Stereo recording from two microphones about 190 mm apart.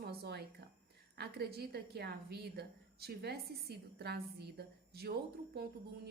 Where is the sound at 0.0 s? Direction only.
55° right (ahead or behind).